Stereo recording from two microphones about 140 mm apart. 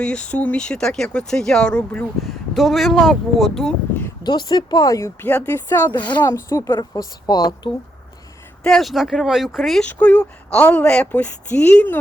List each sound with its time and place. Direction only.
0.0 s speech: 5° left (ahead or behind)
4.2 s speech: 30° left (ahead or behind)
6.7 s speech: 30° left (ahead or behind)
8.6 s speech: centre (ahead or behind)
9.8 s speech: 10° left (ahead or behind)